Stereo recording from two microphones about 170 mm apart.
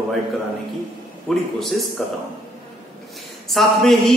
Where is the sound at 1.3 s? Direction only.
Centre (ahead or behind).